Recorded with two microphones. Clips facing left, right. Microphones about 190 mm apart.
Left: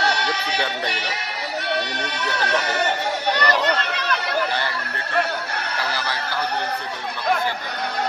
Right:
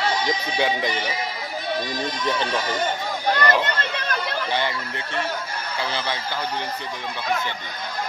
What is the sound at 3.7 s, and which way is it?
Chatter, 70° left (ahead or behind).